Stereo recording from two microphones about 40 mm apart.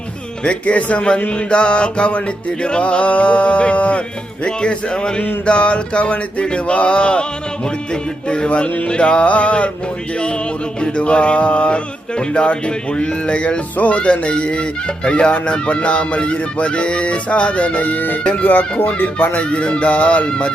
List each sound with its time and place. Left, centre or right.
0.4 s music: left
1.3 s speech: left
8.3 s music: left
10.2 s speech: left
13.7 s speech: left
18.2 s speech: left
19.0 s music: left